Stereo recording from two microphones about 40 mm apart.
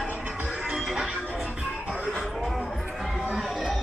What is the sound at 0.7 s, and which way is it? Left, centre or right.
Music, centre.